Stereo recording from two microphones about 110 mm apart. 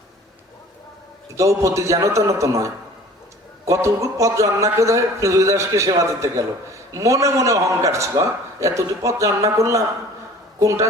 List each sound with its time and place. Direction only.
1.4 s a man's voice: 30° right (ahead or behind)
3.7 s a man's voice: 30° right (ahead or behind)